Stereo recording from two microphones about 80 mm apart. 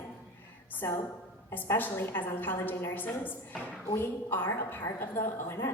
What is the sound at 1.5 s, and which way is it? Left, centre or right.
A woman's voice, left.